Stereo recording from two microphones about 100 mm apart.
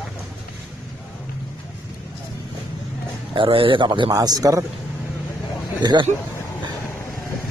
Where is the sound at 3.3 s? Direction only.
65° right (ahead or behind).